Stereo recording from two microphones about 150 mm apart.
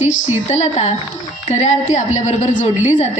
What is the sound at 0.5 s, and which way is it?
A woman's voice, 50° left (ahead or behind).